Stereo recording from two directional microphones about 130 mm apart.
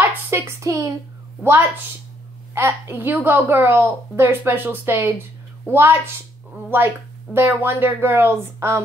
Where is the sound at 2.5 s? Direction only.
15° right (ahead or behind).